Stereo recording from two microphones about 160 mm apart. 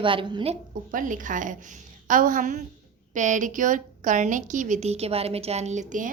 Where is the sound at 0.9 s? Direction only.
55° right (ahead or behind).